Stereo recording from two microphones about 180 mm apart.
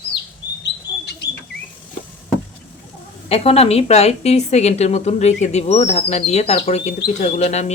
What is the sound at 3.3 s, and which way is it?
A woman's voice, 35° left (ahead or behind).